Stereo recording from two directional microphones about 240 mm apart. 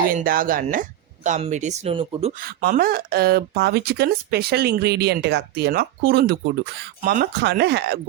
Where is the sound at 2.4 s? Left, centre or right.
Right.